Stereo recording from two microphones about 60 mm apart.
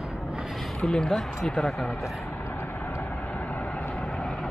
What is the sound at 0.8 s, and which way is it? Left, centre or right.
Speech, centre.